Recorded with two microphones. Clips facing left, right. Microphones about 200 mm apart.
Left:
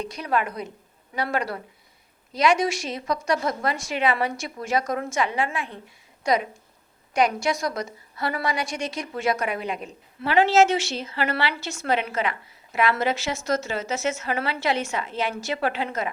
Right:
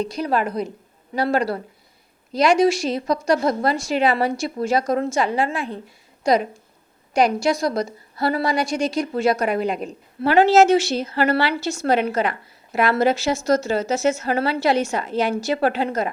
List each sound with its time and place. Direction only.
0.0 s a woman's voice: 35° right (ahead or behind)